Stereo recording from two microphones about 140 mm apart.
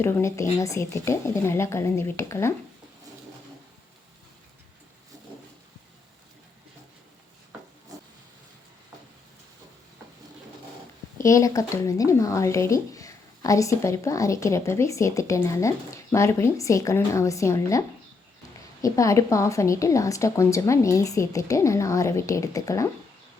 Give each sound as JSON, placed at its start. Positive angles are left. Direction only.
{"t": 0.0, "sound": "speech", "side_deg": 20}
{"t": 11.2, "sound": "speech", "side_deg": 20}